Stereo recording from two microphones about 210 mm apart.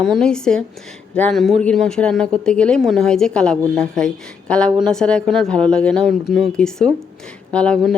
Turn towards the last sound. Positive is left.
turn(degrees=5)  # may be behind; listen again after turning